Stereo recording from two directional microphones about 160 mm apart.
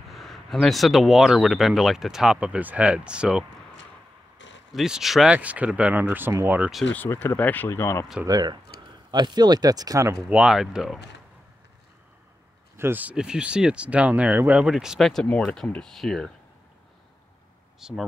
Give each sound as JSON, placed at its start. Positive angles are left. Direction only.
{"t": 0.1, "sound": "speech", "side_deg": 0}
{"t": 4.7, "sound": "speech", "side_deg": -5}
{"t": 6.9, "sound": "speech", "side_deg": 10}
{"t": 8.3, "sound": "speech", "side_deg": -25}
{"t": 10.3, "sound": "speech", "side_deg": -5}
{"t": 12.7, "sound": "speech", "side_deg": -15}
{"t": 17.7, "sound": "speech", "side_deg": -5}